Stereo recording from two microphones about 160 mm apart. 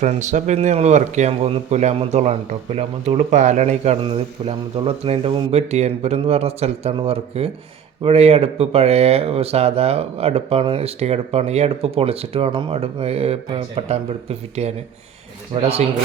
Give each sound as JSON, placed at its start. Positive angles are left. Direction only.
{"t": 0.0, "sound": "speech", "side_deg": -50}
{"t": 4.0, "sound": "speech", "side_deg": -35}